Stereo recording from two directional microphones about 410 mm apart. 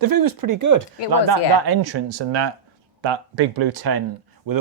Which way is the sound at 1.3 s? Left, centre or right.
Right.